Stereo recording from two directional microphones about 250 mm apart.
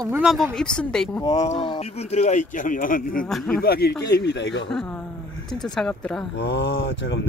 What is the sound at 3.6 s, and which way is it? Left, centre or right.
Speech, left.